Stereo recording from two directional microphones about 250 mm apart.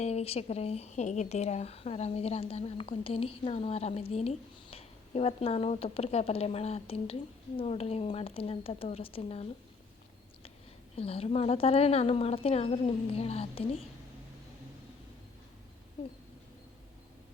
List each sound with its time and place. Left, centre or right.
0.0 s a woman's voice: left
10.9 s a woman's voice: left